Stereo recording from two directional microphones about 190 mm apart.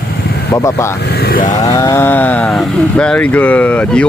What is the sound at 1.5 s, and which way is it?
Speech, 20° left (ahead or behind).